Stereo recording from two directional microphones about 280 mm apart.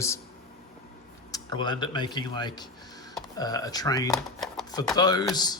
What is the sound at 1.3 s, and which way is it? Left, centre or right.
Speech, centre.